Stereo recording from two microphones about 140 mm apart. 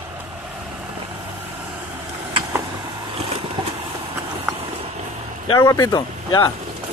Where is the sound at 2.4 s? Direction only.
30° right (ahead or behind).